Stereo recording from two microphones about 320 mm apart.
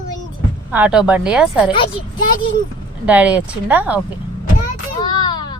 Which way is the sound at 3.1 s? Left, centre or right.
Centre.